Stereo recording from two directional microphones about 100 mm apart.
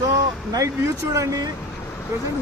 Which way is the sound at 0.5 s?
30° right (ahead or behind).